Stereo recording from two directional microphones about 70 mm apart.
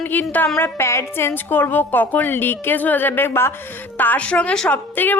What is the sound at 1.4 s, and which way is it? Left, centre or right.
A woman's voice, left.